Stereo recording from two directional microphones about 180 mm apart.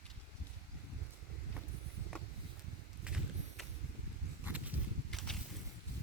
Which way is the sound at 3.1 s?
5° right (ahead or behind).